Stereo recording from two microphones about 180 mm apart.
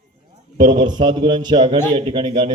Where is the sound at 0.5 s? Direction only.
25° right (ahead or behind).